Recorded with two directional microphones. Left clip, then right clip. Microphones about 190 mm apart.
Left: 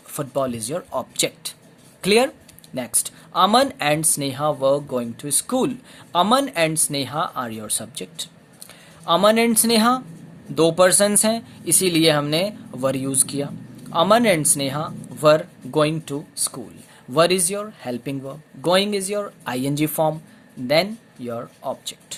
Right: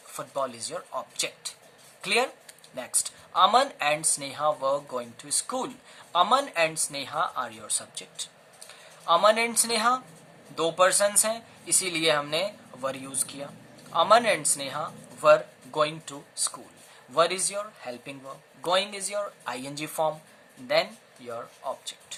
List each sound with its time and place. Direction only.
0.1 s speech: 45° left (ahead or behind)
21.2 s speech: 45° left (ahead or behind)